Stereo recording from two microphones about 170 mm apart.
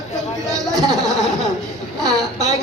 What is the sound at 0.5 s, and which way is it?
Speech, 20° right (ahead or behind).